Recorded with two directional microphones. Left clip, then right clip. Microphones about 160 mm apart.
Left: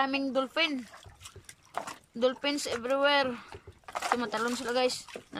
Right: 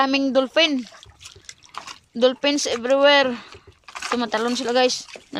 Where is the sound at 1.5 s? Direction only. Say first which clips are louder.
Right 2 dB; 55° left (ahead or behind).